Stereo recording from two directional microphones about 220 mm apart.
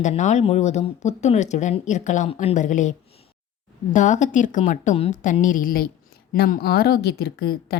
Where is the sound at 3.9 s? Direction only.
35° left (ahead or behind).